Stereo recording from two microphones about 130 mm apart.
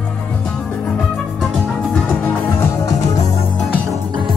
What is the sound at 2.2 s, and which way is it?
Music, 25° left (ahead or behind).